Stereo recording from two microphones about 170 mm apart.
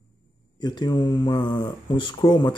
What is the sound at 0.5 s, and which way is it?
Speech, 25° left (ahead or behind).